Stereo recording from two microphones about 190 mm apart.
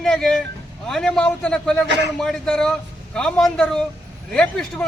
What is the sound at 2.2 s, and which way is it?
A man's voice, 5° left (ahead or behind).